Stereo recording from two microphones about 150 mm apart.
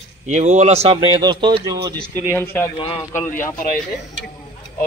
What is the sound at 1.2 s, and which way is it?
Speech, 30° right (ahead or behind).